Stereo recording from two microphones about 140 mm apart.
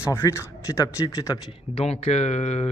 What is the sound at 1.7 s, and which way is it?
Speech, 45° left (ahead or behind).